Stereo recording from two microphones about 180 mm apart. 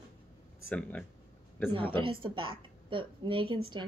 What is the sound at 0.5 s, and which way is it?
Speech, 10° left (ahead or behind).